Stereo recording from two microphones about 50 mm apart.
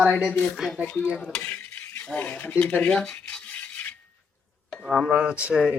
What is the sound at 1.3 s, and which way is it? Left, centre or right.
Cutlery, left.